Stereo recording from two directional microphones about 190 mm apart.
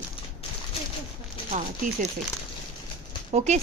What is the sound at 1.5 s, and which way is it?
Speech, 40° right (ahead or behind).